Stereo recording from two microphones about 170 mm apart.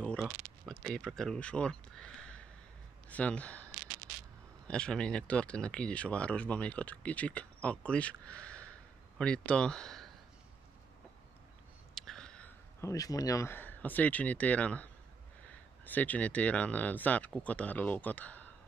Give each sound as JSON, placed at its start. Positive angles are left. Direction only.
{"t": 0.0, "sound": "a man's voice", "side_deg": 5}
{"t": 11.9, "sound": "speech", "side_deg": 0}